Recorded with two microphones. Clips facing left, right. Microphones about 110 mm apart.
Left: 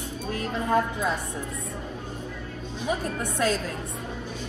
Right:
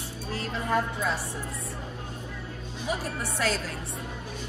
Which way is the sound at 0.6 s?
25° left (ahead or behind).